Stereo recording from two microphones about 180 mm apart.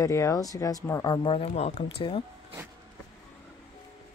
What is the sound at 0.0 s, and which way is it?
Speech, 15° left (ahead or behind).